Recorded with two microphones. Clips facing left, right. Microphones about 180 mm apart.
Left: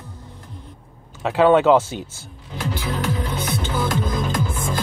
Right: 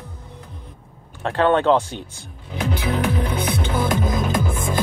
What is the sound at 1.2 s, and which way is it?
Speech, 5° left (ahead or behind).